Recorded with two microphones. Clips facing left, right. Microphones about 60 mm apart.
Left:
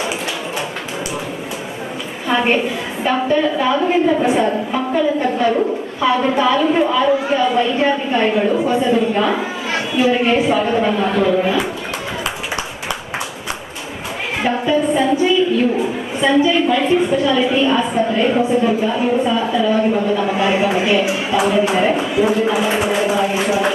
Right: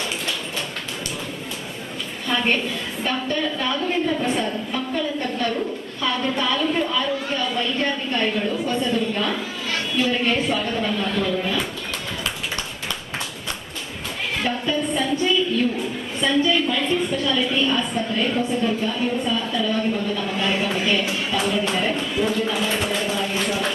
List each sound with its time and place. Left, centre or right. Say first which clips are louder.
2.2 s a woman's voice: left 6 dB; centre
14.6 s speech: left 8 dB; centre